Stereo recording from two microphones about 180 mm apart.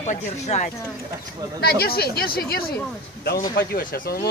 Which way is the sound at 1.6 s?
60° left (ahead or behind).